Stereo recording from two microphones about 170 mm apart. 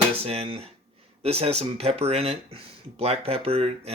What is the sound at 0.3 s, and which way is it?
Speech, 35° right (ahead or behind).